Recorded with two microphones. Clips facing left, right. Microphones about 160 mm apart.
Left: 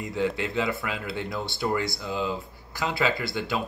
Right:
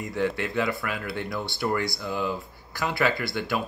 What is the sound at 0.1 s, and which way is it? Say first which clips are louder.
Speech: even; 20° left (ahead or behind).